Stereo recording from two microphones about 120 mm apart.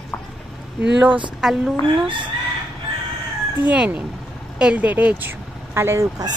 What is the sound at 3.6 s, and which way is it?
A woman's voice, 10° right (ahead or behind).